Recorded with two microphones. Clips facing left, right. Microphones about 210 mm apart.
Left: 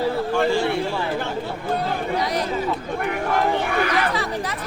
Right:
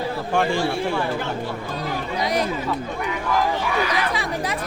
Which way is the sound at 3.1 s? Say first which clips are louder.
Left 2 dB; 60° left (ahead or behind).